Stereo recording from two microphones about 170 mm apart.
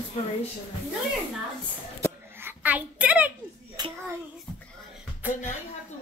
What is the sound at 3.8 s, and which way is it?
Child singing, 25° right (ahead or behind).